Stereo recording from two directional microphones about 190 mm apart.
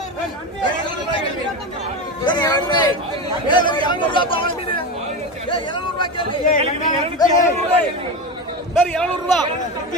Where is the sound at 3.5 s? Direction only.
25° left (ahead or behind).